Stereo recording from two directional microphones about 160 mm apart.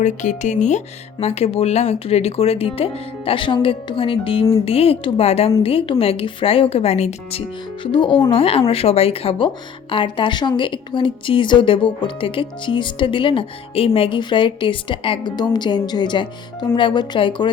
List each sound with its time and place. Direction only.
0.0 s a woman's voice: 50° left (ahead or behind)
7.9 s a woman's voice: 30° left (ahead or behind)